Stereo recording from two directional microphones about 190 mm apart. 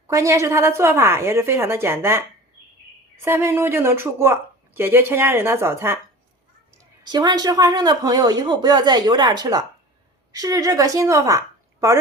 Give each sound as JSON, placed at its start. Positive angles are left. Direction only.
{"t": 0.1, "sound": "speech", "side_deg": -15}
{"t": 7.0, "sound": "a woman's voice", "side_deg": -20}